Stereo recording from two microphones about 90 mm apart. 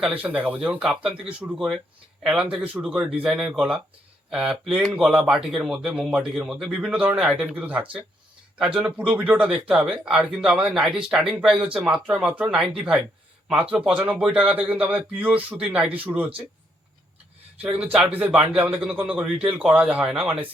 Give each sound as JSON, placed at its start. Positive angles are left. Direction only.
{"t": 0.1, "sound": "speech", "side_deg": -15}
{"t": 9.5, "sound": "speech", "side_deg": -5}
{"t": 17.6, "sound": "speech", "side_deg": -15}